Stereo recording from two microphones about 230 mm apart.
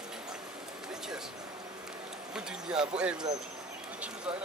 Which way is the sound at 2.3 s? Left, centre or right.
Centre.